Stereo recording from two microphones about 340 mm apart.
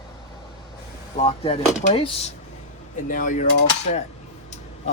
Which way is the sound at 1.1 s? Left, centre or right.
Centre.